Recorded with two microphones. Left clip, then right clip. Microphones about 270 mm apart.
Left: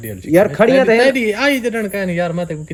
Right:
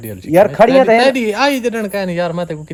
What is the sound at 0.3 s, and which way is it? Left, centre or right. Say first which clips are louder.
Speech: right 2 dB; right.